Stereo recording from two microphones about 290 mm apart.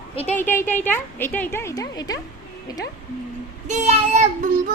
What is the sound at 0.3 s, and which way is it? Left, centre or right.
A woman's voice, centre.